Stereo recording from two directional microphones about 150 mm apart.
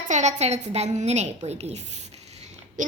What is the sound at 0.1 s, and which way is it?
A woman's voice, 50° right (ahead or behind).